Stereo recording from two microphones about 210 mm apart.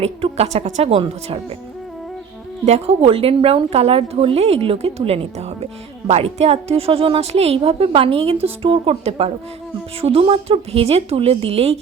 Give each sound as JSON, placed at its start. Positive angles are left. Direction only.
{"t": 0.0, "sound": "speech", "side_deg": -30}
{"t": 2.6, "sound": "speech", "side_deg": -30}